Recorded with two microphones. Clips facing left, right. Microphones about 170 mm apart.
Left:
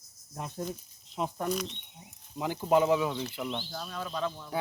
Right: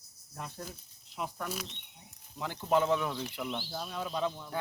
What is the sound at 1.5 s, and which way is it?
Speech, 5° right (ahead or behind).